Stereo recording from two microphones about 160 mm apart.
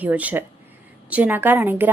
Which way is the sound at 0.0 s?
10° right (ahead or behind).